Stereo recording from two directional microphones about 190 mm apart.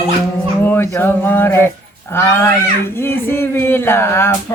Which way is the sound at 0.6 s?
10° left (ahead or behind).